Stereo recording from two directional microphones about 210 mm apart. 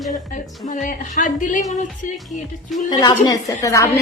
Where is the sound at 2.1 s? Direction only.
Centre (ahead or behind).